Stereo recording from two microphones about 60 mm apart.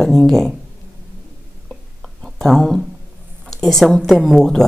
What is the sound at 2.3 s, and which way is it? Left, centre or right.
Speech, centre.